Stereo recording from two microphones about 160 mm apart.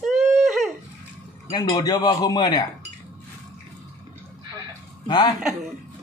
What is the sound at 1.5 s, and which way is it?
A man's voice, 25° left (ahead or behind).